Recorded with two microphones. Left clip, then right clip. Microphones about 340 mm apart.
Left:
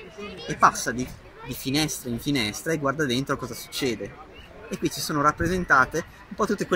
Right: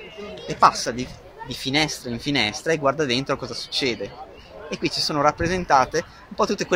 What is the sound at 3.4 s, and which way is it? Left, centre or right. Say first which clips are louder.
Speech: right 4 dB; right.